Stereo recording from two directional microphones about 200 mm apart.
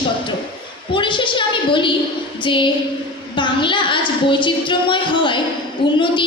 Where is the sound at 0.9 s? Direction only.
25° left (ahead or behind).